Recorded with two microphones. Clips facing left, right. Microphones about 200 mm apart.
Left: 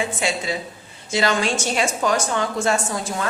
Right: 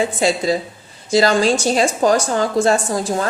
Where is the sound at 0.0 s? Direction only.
35° right (ahead or behind).